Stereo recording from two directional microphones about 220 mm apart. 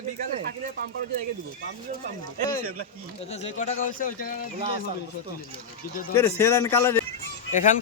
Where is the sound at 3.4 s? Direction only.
35° left (ahead or behind).